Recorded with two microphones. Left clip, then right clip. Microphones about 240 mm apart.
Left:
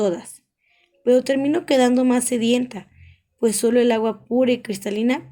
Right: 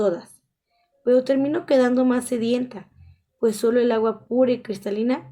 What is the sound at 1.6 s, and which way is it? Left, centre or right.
Speech, left.